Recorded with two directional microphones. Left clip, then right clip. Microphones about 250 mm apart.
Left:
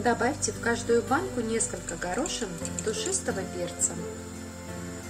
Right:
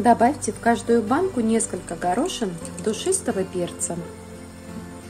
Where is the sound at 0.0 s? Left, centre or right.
Right.